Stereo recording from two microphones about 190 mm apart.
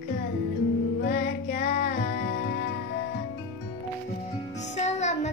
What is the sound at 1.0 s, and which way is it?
Music, 55° left (ahead or behind).